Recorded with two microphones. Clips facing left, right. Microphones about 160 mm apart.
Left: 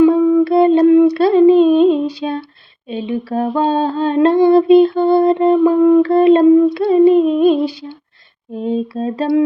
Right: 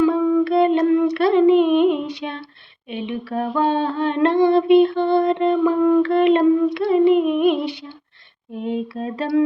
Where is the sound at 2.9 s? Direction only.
35° left (ahead or behind).